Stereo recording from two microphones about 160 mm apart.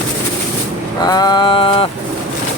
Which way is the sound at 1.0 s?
25° left (ahead or behind).